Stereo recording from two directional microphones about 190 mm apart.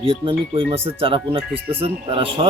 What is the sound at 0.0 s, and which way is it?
Speech, 30° right (ahead or behind).